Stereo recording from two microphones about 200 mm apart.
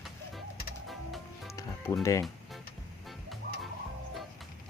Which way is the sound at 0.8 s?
Centre (ahead or behind).